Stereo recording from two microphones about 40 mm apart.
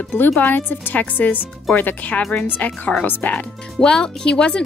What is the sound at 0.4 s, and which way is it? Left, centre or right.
A woman's voice, left.